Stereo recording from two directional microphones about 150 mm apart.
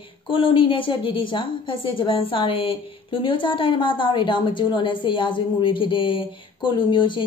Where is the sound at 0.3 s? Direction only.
35° left (ahead or behind).